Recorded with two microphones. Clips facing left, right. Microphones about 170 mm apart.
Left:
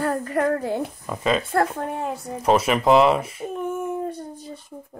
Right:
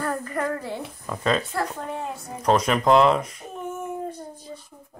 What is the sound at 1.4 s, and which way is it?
Speech, 50° left (ahead or behind).